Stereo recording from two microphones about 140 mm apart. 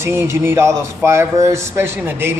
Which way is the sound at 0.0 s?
20° right (ahead or behind).